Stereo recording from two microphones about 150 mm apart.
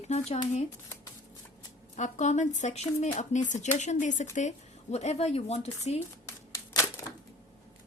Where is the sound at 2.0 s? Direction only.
50° left (ahead or behind).